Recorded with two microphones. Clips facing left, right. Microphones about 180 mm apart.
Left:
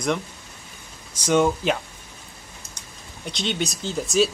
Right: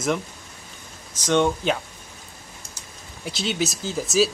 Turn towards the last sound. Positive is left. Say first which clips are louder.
# even
turn(degrees=0)  # may be behind; listen again after turning